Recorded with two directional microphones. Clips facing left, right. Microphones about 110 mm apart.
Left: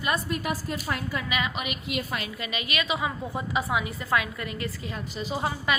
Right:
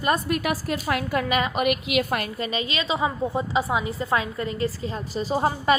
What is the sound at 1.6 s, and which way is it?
Speech, 75° right (ahead or behind).